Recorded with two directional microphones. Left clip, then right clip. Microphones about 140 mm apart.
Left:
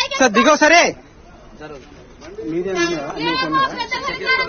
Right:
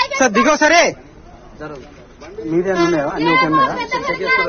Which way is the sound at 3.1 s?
15° right (ahead or behind).